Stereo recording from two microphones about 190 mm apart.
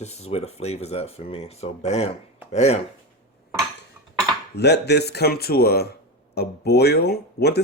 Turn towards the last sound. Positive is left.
turn(degrees=55)  # may be behind; listen again after turning